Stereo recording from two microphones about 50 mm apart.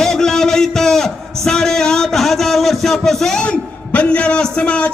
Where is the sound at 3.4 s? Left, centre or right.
Left.